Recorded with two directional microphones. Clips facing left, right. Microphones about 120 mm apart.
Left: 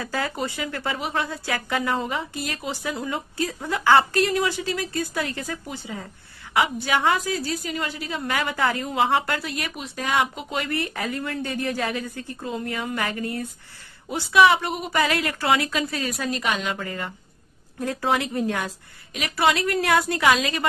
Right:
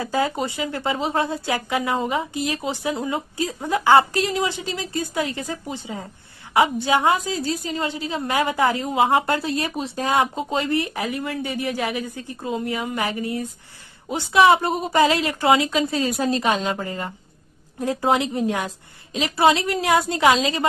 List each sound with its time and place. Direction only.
0.0 s a woman's voice: 20° right (ahead or behind)